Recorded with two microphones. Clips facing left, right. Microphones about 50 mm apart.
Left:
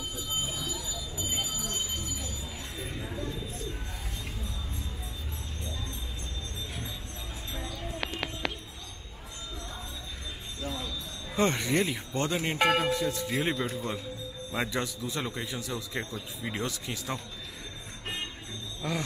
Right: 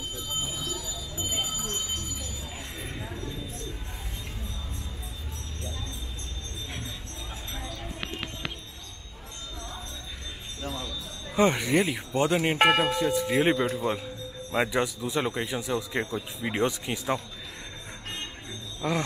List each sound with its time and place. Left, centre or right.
1.1 s a sound: right
2.8 s a sound: centre
3.2 s bird: centre
11.3 s a man's voice: centre
13.4 s a man's voice: right
18.8 s speech: centre